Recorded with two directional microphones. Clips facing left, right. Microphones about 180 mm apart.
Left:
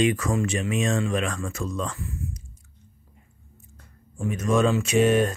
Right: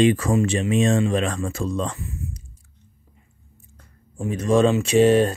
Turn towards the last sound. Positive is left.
turn(degrees=-30)  # may be behind; listen again after turning